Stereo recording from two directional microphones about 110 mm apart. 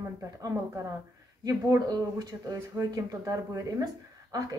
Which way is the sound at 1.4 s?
35° right (ahead or behind).